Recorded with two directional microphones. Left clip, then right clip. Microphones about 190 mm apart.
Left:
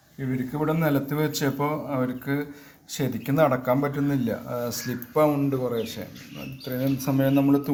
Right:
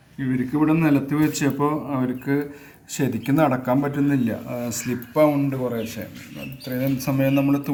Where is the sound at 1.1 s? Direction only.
25° left (ahead or behind).